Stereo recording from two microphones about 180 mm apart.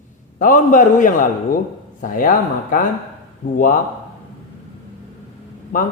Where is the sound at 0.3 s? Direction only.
45° left (ahead or behind).